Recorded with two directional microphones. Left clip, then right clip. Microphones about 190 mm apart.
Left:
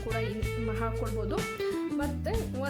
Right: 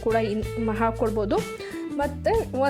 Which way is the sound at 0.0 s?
35° right (ahead or behind).